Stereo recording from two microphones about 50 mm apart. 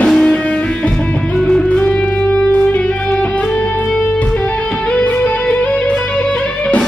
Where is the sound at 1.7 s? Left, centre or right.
Left.